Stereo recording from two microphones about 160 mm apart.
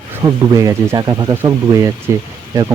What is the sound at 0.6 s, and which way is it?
Speech, 15° right (ahead or behind).